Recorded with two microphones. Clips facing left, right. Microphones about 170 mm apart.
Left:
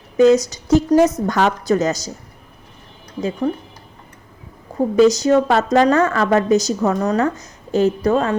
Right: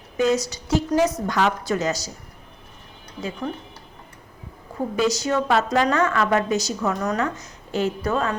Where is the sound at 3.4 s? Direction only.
30° left (ahead or behind).